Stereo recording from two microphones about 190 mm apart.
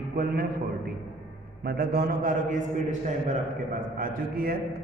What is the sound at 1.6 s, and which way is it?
A man's voice, 55° right (ahead or behind).